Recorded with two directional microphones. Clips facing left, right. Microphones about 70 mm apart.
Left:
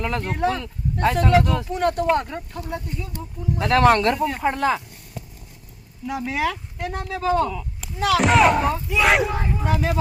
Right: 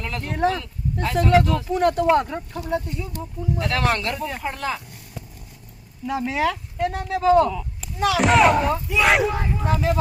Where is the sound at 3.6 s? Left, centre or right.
Left.